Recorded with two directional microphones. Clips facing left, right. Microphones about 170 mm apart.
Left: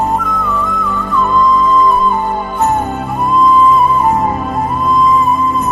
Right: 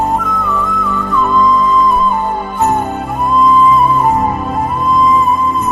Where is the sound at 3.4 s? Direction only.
Centre (ahead or behind).